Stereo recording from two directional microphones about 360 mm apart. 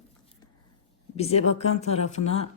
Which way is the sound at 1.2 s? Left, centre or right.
Centre.